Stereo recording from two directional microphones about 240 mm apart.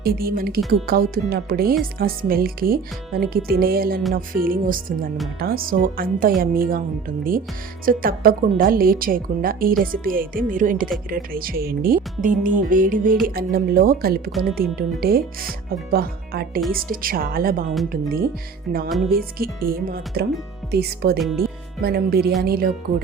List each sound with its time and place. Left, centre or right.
0.0 s speech: right
7.9 s speech: right
18.9 s speech: centre
19.1 s speech: right
21.2 s speech: centre
21.8 s speech: right